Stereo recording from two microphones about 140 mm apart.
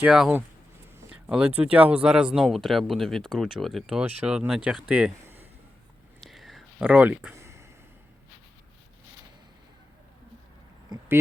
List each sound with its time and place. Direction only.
0.0 s speech: 10° right (ahead or behind)
6.1 s whispering: centre (ahead or behind)
6.8 s speech: 10° right (ahead or behind)